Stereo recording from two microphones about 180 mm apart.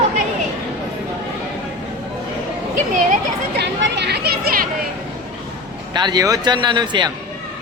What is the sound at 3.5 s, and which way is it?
Speech, 70° right (ahead or behind).